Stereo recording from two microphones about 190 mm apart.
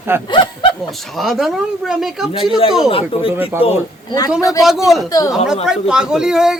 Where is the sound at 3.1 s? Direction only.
30° left (ahead or behind).